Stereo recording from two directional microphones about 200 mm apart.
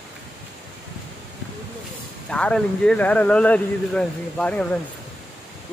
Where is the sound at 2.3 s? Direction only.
5° left (ahead or behind).